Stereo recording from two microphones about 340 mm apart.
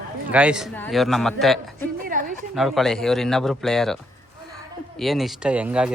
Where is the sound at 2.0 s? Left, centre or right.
Right.